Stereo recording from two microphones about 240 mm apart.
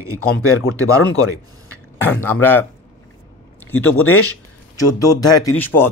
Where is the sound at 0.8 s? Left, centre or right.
Centre.